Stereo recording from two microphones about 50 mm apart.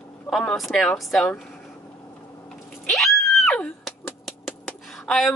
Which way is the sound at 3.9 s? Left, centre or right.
Centre.